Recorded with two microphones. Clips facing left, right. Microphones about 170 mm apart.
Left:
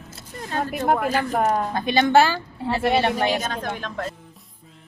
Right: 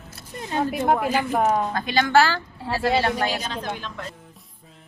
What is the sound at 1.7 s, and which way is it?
Speech, 20° left (ahead or behind).